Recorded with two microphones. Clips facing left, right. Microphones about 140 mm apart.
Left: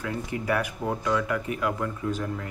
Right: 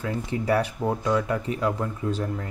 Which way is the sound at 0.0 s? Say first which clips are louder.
Right 3 dB; 30° right (ahead or behind).